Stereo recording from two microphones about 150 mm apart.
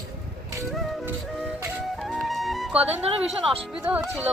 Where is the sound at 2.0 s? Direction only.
Centre (ahead or behind).